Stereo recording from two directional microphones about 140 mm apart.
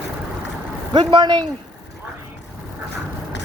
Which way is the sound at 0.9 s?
35° right (ahead or behind).